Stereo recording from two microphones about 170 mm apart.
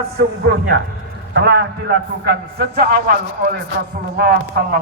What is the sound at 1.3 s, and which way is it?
Speech, 75° right (ahead or behind).